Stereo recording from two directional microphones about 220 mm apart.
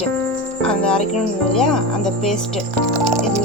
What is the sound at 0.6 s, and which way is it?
Cricket, 5° left (ahead or behind).